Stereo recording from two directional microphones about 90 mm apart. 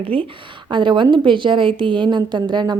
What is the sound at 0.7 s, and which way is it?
A woman's voice, 60° right (ahead or behind).